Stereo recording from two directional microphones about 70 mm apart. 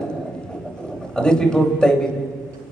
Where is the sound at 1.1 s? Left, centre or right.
Centre.